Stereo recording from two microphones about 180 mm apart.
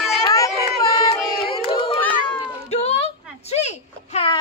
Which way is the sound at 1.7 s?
30° left (ahead or behind).